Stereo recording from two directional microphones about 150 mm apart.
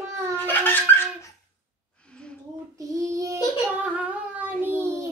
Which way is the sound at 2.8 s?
20° right (ahead or behind).